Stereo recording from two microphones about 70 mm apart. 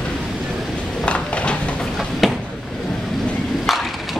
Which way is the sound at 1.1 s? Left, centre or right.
Centre.